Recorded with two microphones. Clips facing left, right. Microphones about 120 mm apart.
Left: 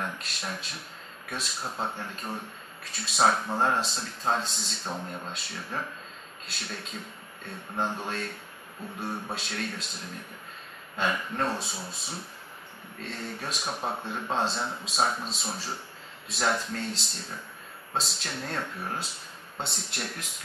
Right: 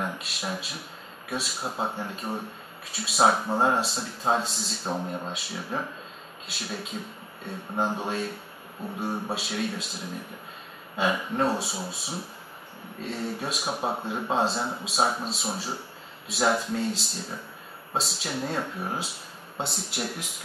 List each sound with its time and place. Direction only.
0.0 s speech: 5° right (ahead or behind)
9.3 s speech: 5° right (ahead or behind)